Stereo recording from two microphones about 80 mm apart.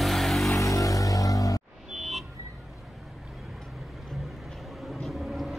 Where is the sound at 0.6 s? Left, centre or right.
Left.